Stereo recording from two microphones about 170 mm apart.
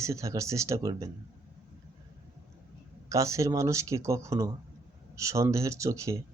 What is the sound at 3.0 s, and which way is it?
Speech, 20° right (ahead or behind).